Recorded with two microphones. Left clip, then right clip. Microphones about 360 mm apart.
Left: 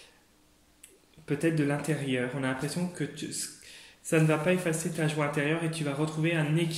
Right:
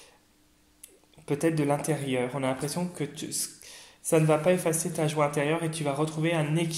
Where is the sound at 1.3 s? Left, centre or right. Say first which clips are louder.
Right 2 dB; centre.